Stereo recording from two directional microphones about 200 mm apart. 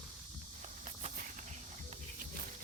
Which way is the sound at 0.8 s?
35° right (ahead or behind).